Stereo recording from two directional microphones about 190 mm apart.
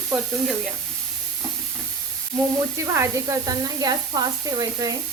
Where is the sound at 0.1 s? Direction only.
Centre (ahead or behind).